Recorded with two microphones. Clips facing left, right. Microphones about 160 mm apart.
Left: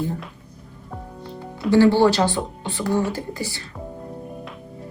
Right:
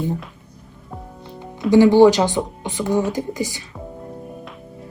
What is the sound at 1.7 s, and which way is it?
Speech, 15° right (ahead or behind).